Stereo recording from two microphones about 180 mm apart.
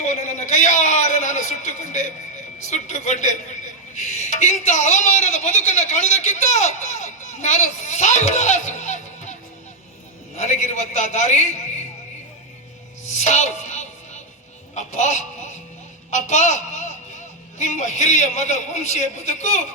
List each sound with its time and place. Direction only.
0.0 s a man's voice: 40° left (ahead or behind)
13.1 s music: 40° left (ahead or behind)
14.8 s a man's voice: 40° left (ahead or behind)